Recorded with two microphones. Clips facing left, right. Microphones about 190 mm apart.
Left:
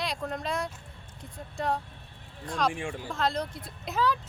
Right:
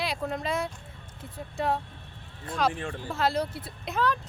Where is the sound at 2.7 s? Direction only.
10° left (ahead or behind).